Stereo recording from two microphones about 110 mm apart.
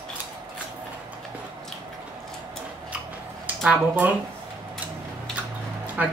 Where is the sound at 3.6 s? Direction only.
15° right (ahead or behind).